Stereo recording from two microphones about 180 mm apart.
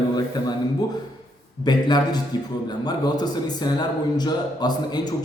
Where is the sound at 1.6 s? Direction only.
25° left (ahead or behind).